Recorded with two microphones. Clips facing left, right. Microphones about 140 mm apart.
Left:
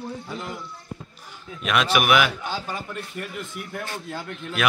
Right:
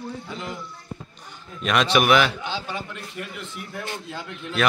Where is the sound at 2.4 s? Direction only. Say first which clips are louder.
Even; 45° left (ahead or behind).